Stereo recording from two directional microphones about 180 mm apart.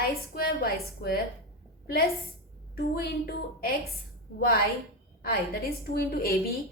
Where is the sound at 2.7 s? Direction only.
60° left (ahead or behind).